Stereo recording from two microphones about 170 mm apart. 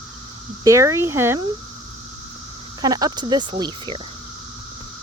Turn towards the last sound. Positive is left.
turn(degrees=-25)  # may be behind; listen again after turning